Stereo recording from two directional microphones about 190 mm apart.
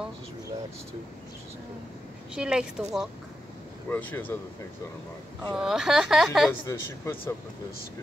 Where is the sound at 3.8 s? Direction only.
10° left (ahead or behind).